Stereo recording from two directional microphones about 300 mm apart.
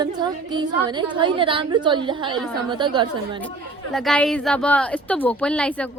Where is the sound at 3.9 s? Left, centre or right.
Centre.